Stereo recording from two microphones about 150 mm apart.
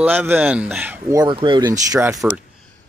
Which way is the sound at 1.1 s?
30° right (ahead or behind).